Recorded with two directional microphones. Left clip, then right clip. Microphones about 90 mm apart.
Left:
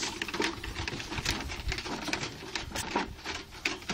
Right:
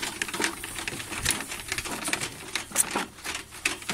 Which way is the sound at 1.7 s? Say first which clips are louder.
Right 4 dB; 25° right (ahead or behind).